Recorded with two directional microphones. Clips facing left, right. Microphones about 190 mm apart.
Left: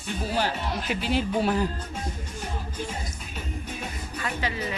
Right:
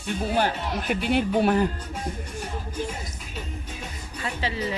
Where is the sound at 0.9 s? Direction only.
55° right (ahead or behind).